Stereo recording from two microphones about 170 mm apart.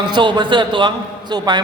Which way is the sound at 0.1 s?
25° right (ahead or behind).